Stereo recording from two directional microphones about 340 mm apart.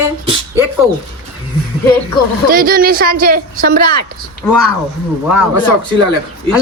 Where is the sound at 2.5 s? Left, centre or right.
Right.